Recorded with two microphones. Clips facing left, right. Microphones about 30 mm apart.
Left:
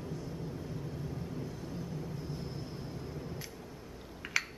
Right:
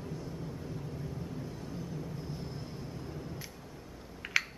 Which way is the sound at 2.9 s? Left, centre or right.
Centre.